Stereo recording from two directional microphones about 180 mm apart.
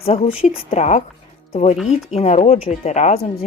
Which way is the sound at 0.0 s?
35° left (ahead or behind).